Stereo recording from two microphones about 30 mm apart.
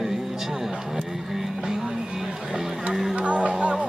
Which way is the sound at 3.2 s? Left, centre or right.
Right.